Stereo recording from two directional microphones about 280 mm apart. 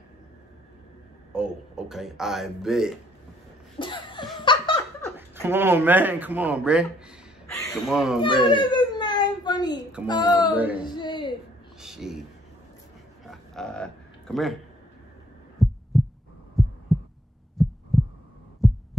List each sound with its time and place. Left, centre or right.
1.3 s a man's voice: centre
3.8 s laughter: centre
5.1 s speech: centre
7.5 s a sound: centre
7.9 s a man's voice: centre
8.5 s whimper: centre
10.0 s speech: centre
10.5 s a man's voice: centre
10.8 s a sound: centre
11.8 s a sound: centre
13.2 s a sound: centre
15.6 s pulse: centre
17.6 s heart sounds: centre